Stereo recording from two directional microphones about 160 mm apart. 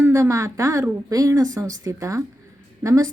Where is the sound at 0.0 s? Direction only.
15° right (ahead or behind).